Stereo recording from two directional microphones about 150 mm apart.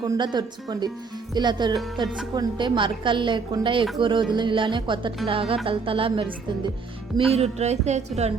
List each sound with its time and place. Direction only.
0.0 s speech: 30° right (ahead or behind)
7.3 s music: 45° right (ahead or behind)